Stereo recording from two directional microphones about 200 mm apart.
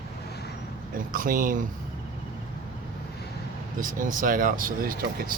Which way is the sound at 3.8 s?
40° right (ahead or behind).